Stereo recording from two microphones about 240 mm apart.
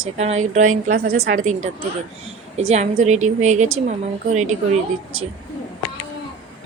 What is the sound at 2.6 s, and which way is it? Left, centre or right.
A woman's voice, right.